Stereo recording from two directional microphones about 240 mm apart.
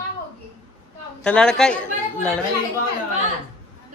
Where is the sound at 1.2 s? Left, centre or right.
Centre.